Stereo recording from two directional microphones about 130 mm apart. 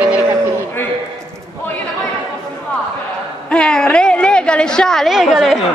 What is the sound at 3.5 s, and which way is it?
A woman's voice, 5° left (ahead or behind).